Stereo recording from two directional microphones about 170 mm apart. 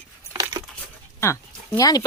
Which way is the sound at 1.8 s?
20° left (ahead or behind).